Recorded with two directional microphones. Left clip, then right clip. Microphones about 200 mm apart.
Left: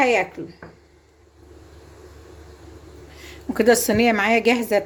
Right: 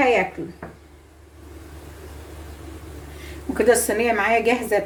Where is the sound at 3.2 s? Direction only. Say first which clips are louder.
Even; 45° left (ahead or behind).